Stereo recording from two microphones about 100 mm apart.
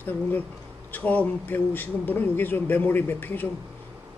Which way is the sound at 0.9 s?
15° left (ahead or behind).